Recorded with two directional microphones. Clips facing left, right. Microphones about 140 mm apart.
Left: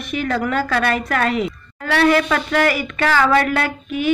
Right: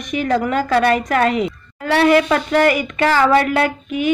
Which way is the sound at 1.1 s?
40° right (ahead or behind).